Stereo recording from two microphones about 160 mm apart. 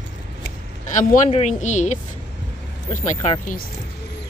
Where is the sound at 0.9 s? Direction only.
50° left (ahead or behind).